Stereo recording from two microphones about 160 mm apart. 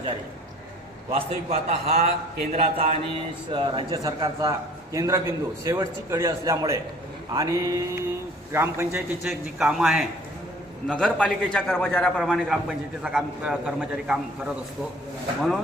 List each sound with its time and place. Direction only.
1.1 s a man's voice: 40° right (ahead or behind); by 9.3 s 15° right (ahead or behind)
9.6 s a man's voice: centre (ahead or behind)